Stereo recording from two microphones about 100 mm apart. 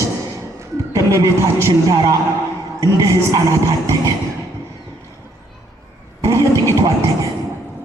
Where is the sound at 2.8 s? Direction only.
35° right (ahead or behind).